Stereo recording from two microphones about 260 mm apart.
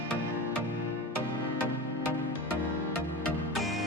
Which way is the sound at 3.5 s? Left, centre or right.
Centre.